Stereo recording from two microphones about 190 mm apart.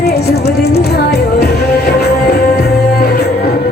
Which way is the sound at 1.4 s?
55° left (ahead or behind).